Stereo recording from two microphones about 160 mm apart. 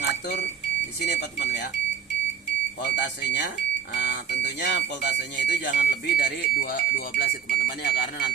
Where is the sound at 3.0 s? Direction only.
90° left.